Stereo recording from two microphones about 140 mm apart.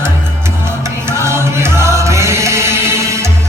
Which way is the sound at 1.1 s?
20° right (ahead or behind).